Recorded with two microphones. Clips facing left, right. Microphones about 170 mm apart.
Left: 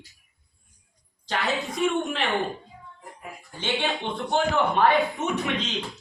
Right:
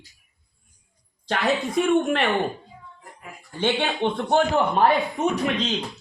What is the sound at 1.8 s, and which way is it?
Speech, 60° right (ahead or behind).